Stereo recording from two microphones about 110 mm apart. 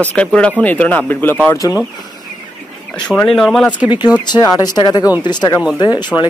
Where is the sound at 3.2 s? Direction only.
5° left (ahead or behind).